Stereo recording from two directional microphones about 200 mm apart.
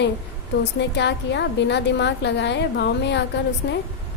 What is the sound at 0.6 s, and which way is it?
A woman's voice, 60° left (ahead or behind).